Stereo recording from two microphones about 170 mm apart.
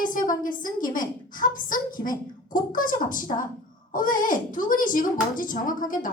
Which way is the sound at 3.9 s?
55° left (ahead or behind).